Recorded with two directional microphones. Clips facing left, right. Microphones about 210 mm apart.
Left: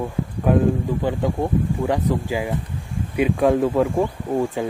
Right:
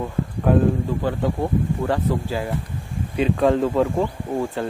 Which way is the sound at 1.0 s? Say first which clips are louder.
Left 1 dB; 15° left (ahead or behind).